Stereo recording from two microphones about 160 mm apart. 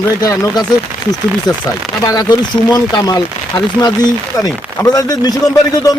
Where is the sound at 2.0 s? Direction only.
25° left (ahead or behind).